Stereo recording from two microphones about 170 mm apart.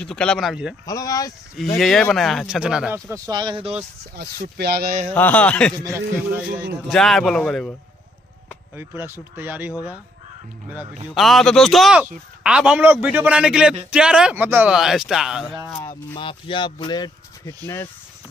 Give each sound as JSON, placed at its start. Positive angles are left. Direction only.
{"t": 0.0, "sound": "speech", "side_deg": 5}
{"t": 0.8, "sound": "speech", "side_deg": 20}
{"t": 1.8, "sound": "speech", "side_deg": 5}
{"t": 3.1, "sound": "speech", "side_deg": -25}
{"t": 4.2, "sound": "speech", "side_deg": -75}
{"t": 5.1, "sound": "speech", "side_deg": 10}
{"t": 5.9, "sound": "a man's voice", "side_deg": -10}
{"t": 6.9, "sound": "speech", "side_deg": 0}
{"t": 8.7, "sound": "a man's voice", "side_deg": -15}
{"t": 11.1, "sound": "a man's voice", "side_deg": 0}
{"t": 16.2, "sound": "speech", "side_deg": 30}